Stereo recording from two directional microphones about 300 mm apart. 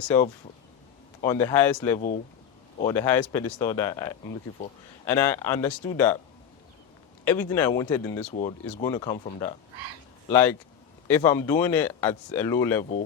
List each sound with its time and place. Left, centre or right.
1.2 s speech: centre
7.3 s speech: centre
8.3 s speech: left; by 12.8 s centre